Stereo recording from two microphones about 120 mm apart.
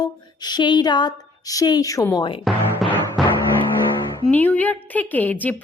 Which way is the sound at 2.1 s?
45° left (ahead or behind).